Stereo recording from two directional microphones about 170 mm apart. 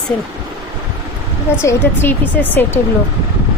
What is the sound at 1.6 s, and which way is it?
Speech, 15° left (ahead or behind).